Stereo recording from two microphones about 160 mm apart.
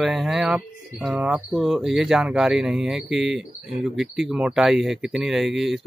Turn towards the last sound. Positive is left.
turn(degrees=0)  # may be behind; listen again after turning